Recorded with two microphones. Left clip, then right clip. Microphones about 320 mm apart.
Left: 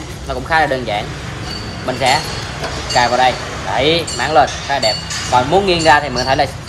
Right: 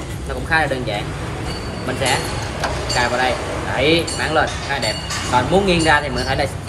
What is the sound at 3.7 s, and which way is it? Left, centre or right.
Speech, centre.